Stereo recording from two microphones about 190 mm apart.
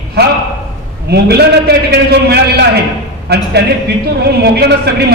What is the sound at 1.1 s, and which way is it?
A man's voice, 60° right (ahead or behind).